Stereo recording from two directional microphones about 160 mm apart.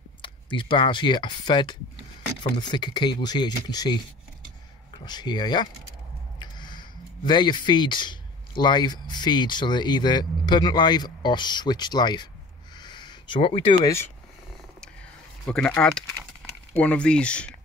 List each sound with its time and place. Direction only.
0.2 s speech: 30° left (ahead or behind)
12.7 s a sound: 30° left (ahead or behind)
15.4 s speech: 5° left (ahead or behind)